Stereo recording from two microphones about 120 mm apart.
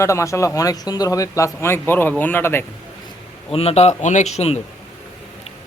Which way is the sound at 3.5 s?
60° left (ahead or behind).